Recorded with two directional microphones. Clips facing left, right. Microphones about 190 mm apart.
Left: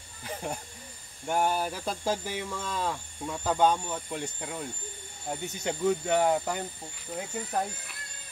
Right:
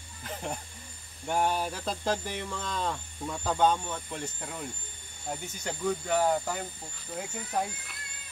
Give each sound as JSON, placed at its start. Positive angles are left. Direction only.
{"t": 0.2, "sound": "speech", "side_deg": 10}
{"t": 5.4, "sound": "speech", "side_deg": 20}
{"t": 7.2, "sound": "speech", "side_deg": 0}